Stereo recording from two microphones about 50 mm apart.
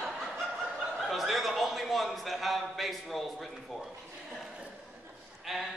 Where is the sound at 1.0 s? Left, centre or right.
Centre.